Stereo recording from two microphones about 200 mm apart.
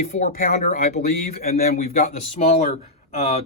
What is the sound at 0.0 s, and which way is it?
Speech, 40° left (ahead or behind).